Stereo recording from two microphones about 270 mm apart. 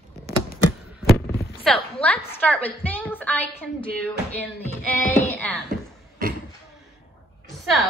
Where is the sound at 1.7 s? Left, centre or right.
Centre.